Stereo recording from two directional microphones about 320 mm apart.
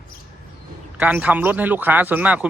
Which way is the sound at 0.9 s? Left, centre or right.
Centre.